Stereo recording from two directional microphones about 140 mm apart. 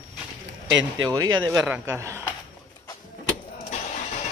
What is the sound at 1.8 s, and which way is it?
Speech, 20° right (ahead or behind).